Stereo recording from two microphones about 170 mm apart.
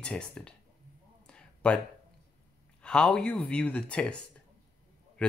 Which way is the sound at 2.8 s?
5° left (ahead or behind).